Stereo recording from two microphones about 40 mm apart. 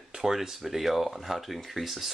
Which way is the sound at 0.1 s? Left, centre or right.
Centre.